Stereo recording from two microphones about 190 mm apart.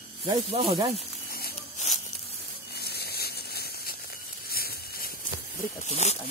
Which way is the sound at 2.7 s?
55° left (ahead or behind).